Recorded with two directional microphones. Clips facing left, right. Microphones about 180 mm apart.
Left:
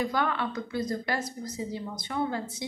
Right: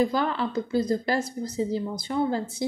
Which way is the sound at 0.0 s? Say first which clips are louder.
Right 4 dB; 30° right (ahead or behind).